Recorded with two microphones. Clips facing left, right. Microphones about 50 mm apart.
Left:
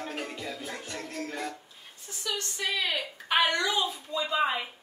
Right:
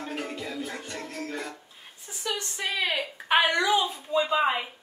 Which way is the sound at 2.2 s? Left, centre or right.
Right.